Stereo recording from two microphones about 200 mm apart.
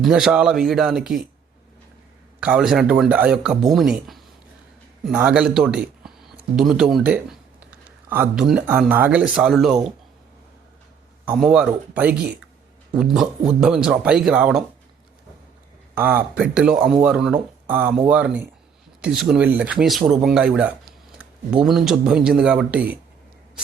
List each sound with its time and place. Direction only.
0.0 s speech: centre (ahead or behind)
2.4 s speech: 5° right (ahead or behind)
11.3 s speech: 5° right (ahead or behind)
16.0 s speech: 10° right (ahead or behind)